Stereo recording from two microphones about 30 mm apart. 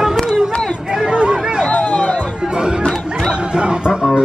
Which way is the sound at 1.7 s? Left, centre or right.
Left.